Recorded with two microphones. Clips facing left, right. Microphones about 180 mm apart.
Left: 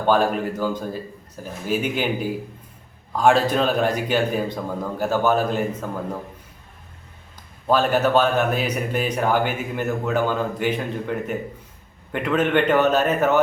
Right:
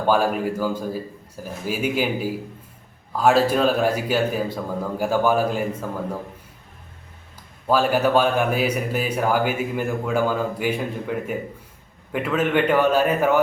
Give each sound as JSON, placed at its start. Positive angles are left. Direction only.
{"t": 0.1, "sound": "speech", "side_deg": -10}
{"t": 7.7, "sound": "speech", "side_deg": -10}